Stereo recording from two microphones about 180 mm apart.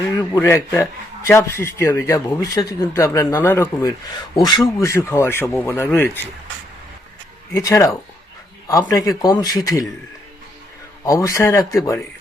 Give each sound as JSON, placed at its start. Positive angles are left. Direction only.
{"t": 0.2, "sound": "a man's voice", "side_deg": 15}
{"t": 4.1, "sound": "a man's voice", "side_deg": 25}
{"t": 7.5, "sound": "a man's voice", "side_deg": 15}
{"t": 11.0, "sound": "a man's voice", "side_deg": 20}